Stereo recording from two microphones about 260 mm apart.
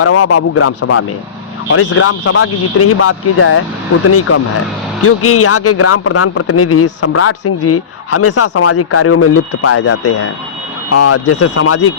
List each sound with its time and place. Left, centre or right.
0.0 s speech: left
10.9 s speech: left